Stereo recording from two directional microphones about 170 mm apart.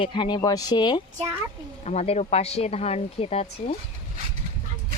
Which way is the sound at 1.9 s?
40° left (ahead or behind).